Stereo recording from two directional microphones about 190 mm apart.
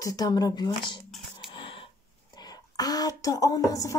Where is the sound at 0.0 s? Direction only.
20° left (ahead or behind).